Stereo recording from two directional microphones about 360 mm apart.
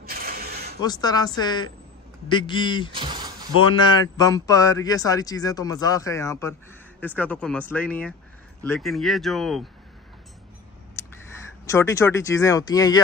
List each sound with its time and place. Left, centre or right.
0.0 s mechanisms: right
0.7 s speech: centre
2.9 s a sound: centre
3.6 s speech: centre
11.0 s a sound: centre
11.7 s speech: centre